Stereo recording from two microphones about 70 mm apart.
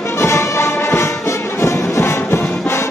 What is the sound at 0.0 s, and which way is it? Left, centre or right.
Music, left.